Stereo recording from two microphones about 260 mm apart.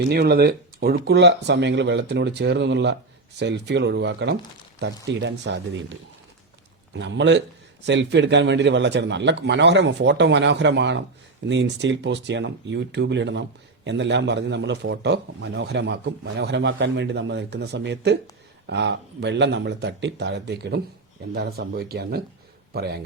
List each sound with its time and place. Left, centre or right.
0.1 s a man's voice: right